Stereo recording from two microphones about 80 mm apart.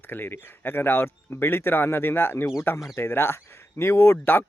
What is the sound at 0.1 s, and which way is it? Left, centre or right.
A man's voice, left.